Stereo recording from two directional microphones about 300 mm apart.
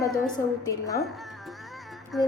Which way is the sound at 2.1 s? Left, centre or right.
Centre.